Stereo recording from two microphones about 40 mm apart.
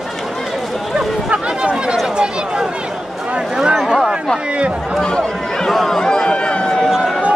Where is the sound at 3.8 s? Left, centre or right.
Centre.